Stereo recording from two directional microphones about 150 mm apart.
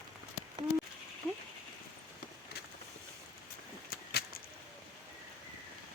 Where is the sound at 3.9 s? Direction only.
90° left.